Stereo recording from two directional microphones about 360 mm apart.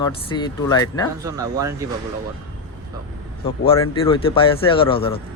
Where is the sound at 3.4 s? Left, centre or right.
Centre.